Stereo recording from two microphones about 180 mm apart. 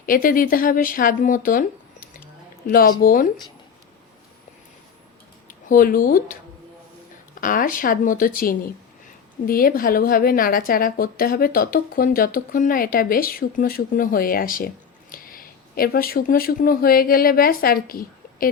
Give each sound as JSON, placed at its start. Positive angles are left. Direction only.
{"t": 0.0, "sound": "a woman's voice", "side_deg": 50}
{"t": 2.6, "sound": "a woman's voice", "side_deg": 55}
{"t": 5.5, "sound": "speech", "side_deg": 50}
{"t": 7.4, "sound": "a woman's voice", "side_deg": 50}